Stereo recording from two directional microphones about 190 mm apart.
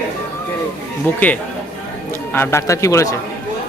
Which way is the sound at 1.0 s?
10° left (ahead or behind).